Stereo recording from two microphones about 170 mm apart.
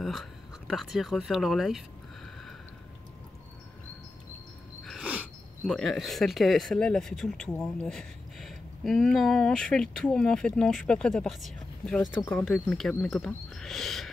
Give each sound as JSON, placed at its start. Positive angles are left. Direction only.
{"t": 0.0, "sound": "speech", "side_deg": 0}
{"t": 4.8, "sound": "a sound", "side_deg": -5}
{"t": 5.7, "sound": "speech", "side_deg": 5}